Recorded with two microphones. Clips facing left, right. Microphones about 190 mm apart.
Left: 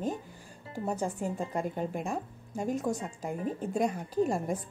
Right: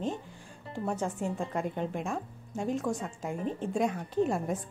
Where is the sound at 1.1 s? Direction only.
Centre (ahead or behind).